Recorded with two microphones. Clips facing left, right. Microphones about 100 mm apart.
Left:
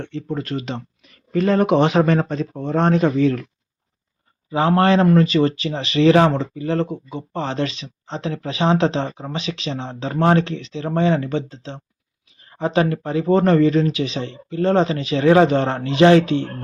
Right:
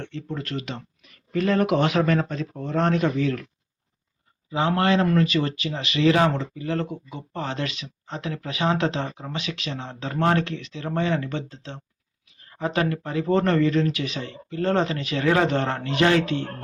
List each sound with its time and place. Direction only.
0.0 s speech: 20° left (ahead or behind)
4.5 s speech: 40° left (ahead or behind); by 16.4 s 25° left (ahead or behind)